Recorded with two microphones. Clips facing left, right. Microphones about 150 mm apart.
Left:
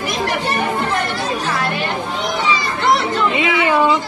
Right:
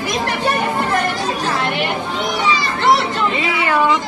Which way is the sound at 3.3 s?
20° left (ahead or behind).